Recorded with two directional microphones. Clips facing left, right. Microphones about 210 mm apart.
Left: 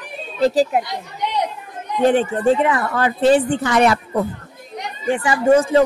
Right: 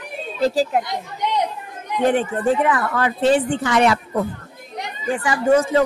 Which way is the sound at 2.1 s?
25° left (ahead or behind).